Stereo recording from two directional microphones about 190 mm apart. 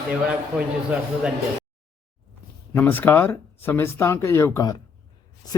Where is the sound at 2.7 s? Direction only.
10° left (ahead or behind).